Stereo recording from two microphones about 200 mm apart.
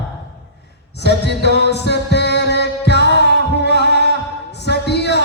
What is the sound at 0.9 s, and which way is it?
Music, 55° left (ahead or behind).